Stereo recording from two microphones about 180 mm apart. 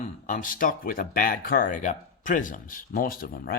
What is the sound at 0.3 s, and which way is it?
Speech, 50° left (ahead or behind).